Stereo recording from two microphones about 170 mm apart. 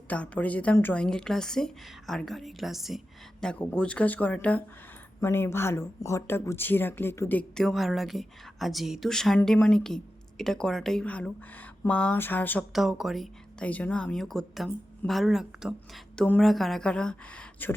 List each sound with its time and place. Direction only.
0.1 s speech: 10° left (ahead or behind)
12.7 s speech: centre (ahead or behind)